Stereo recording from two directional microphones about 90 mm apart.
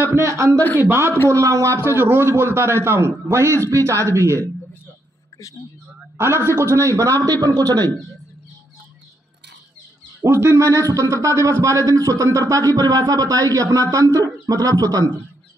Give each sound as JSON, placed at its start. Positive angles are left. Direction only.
{"t": 0.0, "sound": "a man's voice", "side_deg": -30}
{"t": 1.3, "sound": "a man's voice", "side_deg": -35}
{"t": 6.1, "sound": "a man's voice", "side_deg": -25}
{"t": 10.2, "sound": "a man's voice", "side_deg": -30}